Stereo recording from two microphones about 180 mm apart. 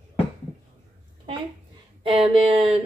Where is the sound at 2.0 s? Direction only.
30° right (ahead or behind).